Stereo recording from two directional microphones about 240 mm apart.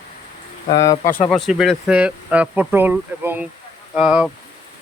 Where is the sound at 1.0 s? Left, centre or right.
Left.